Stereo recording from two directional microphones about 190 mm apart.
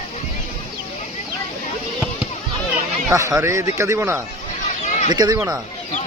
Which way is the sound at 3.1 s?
15° right (ahead or behind).